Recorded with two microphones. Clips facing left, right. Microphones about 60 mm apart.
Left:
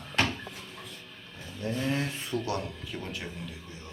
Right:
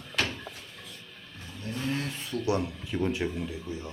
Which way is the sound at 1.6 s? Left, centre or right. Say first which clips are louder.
Left 2 dB; left.